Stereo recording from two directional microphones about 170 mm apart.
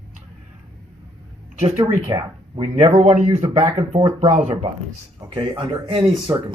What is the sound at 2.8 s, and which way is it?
Speech, 40° right (ahead or behind).